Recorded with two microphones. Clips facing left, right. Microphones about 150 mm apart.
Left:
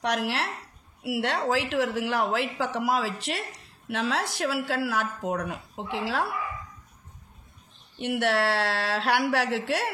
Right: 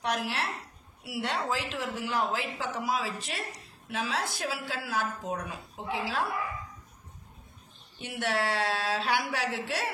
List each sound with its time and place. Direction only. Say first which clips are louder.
0.0 s a woman's voice: left 4 dB; 70° left (ahead or behind)
1.4 s speech: left 7 dB; 75° left (ahead or behind)
8.0 s speech: left 6 dB; 75° left (ahead or behind)